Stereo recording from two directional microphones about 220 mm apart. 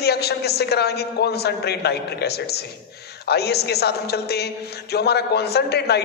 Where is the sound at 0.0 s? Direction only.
45° left (ahead or behind).